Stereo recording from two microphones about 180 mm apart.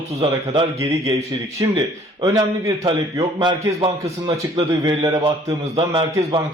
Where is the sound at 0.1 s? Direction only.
35° right (ahead or behind).